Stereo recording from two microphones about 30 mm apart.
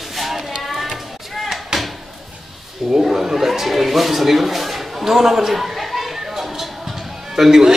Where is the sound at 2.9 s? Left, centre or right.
Centre.